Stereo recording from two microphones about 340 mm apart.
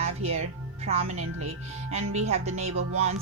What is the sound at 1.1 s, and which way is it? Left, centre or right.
Speech, right.